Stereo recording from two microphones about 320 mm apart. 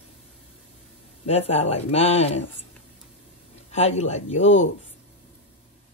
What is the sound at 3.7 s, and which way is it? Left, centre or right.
Speech, centre.